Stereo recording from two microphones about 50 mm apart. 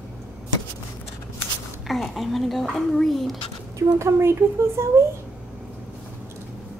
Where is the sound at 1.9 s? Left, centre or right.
Centre.